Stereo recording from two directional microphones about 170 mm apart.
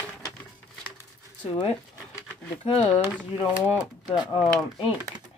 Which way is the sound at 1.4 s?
25° left (ahead or behind).